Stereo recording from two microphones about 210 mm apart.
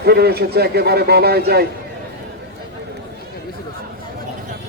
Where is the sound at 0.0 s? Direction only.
50° right (ahead or behind).